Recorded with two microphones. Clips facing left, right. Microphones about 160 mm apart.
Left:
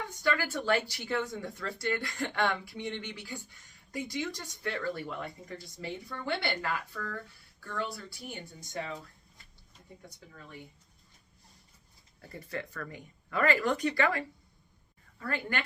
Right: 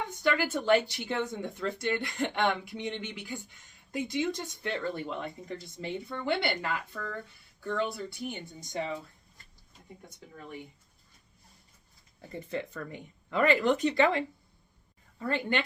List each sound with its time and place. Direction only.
0.2 s speech: 20° right (ahead or behind)
12.3 s speech: 20° right (ahead or behind)